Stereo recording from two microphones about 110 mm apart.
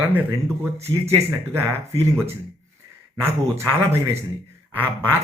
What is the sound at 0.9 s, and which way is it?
Speech, 45° right (ahead or behind).